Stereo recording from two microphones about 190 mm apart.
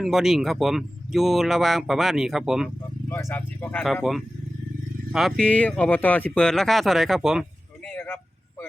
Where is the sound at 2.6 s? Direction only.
10° left (ahead or behind).